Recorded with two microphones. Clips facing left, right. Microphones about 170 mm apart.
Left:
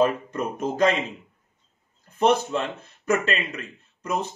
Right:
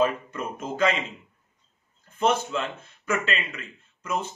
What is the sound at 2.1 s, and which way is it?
Speech, 40° left (ahead or behind).